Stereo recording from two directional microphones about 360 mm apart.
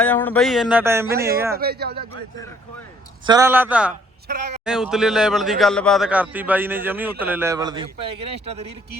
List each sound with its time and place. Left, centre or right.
0.0 s speech: centre
1.5 s speech: right
3.2 s speech: centre
4.3 s speech: right
4.6 s speech: centre